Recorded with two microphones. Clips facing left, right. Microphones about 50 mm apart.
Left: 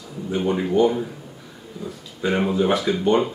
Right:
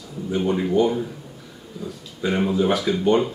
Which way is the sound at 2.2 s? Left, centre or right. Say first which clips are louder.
Even; centre.